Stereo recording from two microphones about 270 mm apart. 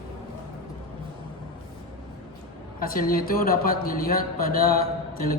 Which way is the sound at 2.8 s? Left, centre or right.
Left.